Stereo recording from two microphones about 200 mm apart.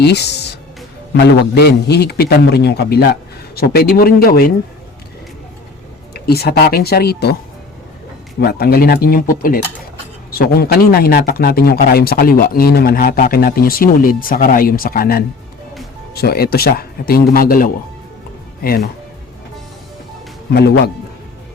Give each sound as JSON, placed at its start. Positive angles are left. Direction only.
{"t": 0.0, "sound": "a man's voice", "side_deg": 55}
{"t": 6.1, "sound": "speech", "side_deg": 50}
{"t": 8.4, "sound": "speech", "side_deg": 50}
{"t": 20.5, "sound": "speech", "side_deg": 55}